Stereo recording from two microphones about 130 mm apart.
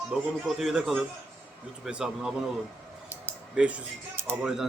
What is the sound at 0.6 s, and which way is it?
Speech, centre (ahead or behind).